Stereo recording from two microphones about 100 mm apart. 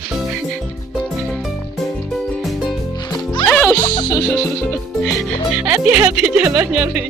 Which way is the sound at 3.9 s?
45° left (ahead or behind).